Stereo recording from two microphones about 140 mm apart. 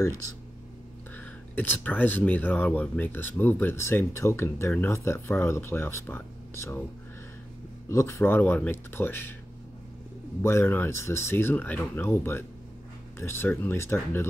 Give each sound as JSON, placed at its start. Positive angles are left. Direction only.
{"t": 1.1, "sound": "speech", "side_deg": 10}
{"t": 7.9, "sound": "speech", "side_deg": 20}
{"t": 10.4, "sound": "speech", "side_deg": 20}